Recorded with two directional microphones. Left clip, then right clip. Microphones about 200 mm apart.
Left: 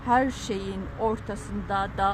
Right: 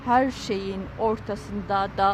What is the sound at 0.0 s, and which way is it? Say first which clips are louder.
Speech: right 2 dB; 15° right (ahead or behind).